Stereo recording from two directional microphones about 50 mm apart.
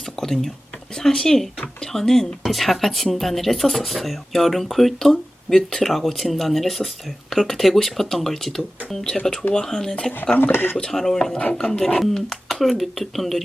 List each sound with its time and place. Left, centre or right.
0.2 s speech: centre
10.3 s speech: left
10.9 s speech: centre